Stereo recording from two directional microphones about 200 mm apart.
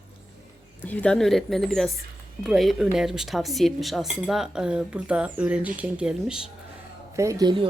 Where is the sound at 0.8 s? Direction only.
5° left (ahead or behind).